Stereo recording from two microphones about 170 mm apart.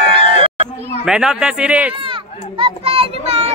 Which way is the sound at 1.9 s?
30° right (ahead or behind).